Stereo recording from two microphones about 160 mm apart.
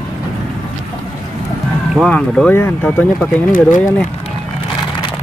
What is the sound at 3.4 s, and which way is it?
Speech, 55° left (ahead or behind).